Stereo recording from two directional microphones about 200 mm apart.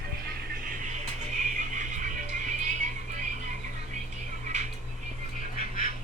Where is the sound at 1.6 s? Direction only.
40° right (ahead or behind).